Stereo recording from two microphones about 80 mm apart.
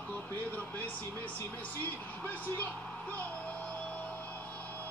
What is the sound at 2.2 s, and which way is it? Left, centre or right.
Speech, left.